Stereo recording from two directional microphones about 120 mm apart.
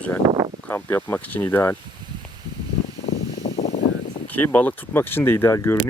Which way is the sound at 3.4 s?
55° left (ahead or behind).